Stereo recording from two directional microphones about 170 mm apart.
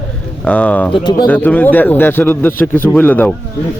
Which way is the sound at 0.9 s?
25° left (ahead or behind).